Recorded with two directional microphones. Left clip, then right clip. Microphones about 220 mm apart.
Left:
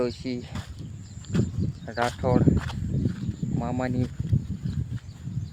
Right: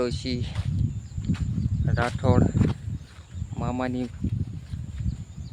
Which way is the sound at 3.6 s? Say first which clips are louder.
Right 1 dB; 5° right (ahead or behind).